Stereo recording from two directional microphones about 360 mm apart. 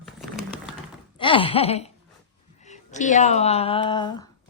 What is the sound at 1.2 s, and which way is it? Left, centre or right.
Speech, centre.